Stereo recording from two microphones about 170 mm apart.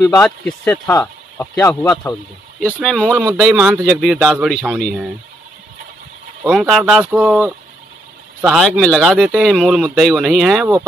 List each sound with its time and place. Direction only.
0.0 s speech: 15° left (ahead or behind)
0.9 s a sound: 15° left (ahead or behind)
1.6 s speech: 15° left (ahead or behind)
2.8 s speech: 5° left (ahead or behind)
6.4 s speech: centre (ahead or behind)